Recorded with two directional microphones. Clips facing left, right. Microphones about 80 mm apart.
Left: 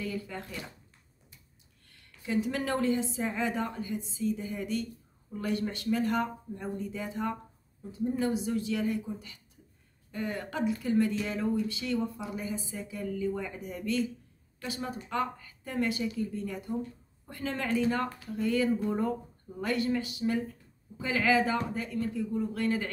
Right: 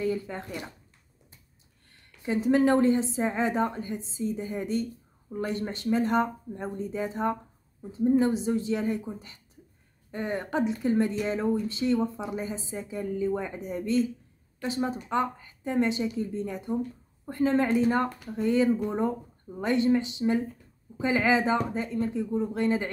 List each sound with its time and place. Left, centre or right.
0.0 s speech: right
1.9 s speech: right